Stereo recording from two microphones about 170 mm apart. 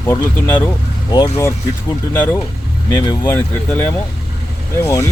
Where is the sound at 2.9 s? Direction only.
25° left (ahead or behind).